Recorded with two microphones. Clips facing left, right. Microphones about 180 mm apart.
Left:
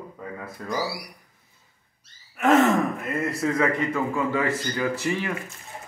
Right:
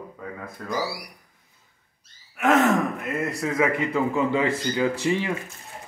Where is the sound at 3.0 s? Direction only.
Centre (ahead or behind).